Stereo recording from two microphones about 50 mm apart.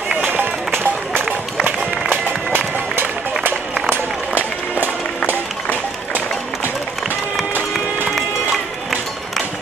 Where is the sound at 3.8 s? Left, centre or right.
Right.